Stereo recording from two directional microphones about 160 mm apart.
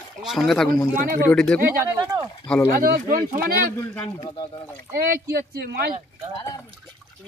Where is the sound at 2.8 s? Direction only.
60° right (ahead or behind).